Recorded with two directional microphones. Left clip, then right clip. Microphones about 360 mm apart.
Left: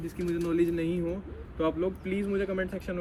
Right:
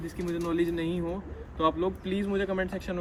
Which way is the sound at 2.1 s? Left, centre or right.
Right.